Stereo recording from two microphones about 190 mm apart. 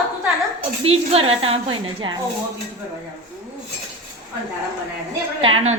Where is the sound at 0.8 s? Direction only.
30° right (ahead or behind).